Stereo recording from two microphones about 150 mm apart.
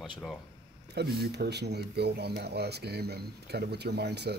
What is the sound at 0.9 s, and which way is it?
Speech, 90° right.